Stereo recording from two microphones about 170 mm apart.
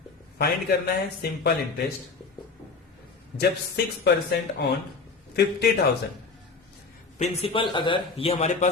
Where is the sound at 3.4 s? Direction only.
70° left (ahead or behind).